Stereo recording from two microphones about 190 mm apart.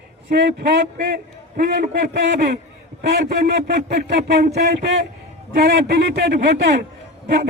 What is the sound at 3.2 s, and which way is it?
Speech, 55° right (ahead or behind).